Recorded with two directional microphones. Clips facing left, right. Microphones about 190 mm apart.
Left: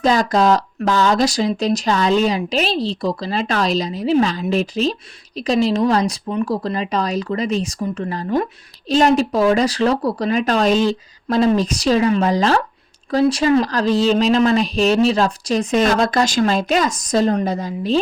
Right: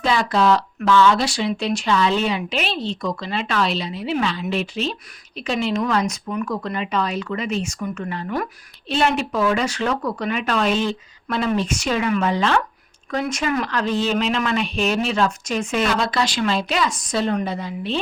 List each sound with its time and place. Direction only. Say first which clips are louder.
0.0 s speech: left 4 dB; 40° left (ahead or behind)